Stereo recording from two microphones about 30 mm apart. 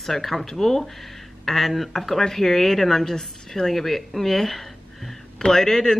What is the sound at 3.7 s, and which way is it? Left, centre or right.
A woman's voice, centre.